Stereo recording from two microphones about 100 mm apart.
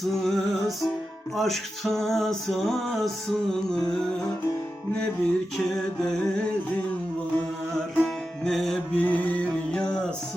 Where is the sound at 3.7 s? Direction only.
5° left (ahead or behind).